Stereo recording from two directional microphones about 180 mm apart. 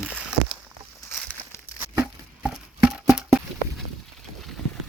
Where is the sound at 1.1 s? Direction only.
10° left (ahead or behind).